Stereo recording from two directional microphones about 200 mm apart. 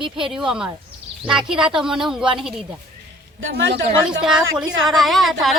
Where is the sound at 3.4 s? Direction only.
70° right (ahead or behind).